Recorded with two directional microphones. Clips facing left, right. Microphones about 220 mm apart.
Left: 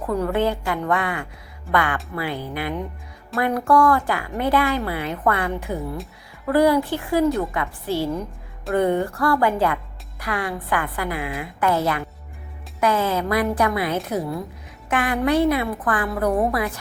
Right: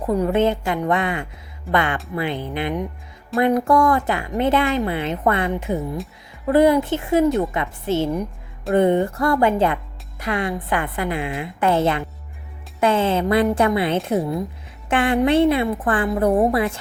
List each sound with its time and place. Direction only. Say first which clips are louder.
0.0 s speech: right 3 dB; 15° right (ahead or behind)